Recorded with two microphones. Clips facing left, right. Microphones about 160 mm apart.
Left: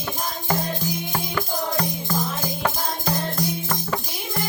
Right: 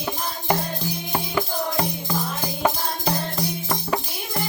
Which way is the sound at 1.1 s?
15° right (ahead or behind).